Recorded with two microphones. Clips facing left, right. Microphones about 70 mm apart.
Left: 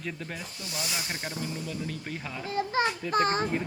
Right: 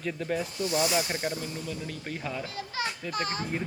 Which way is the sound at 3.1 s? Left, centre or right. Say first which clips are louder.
Left 9 dB; left.